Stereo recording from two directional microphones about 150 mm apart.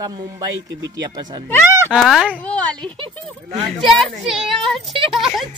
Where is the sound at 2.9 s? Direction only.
35° right (ahead or behind).